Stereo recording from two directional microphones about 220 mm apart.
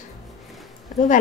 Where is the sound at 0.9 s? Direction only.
35° left (ahead or behind).